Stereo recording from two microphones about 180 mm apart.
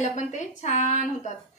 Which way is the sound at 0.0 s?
40° left (ahead or behind).